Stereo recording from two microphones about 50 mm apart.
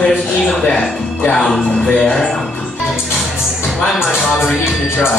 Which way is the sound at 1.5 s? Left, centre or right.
Centre.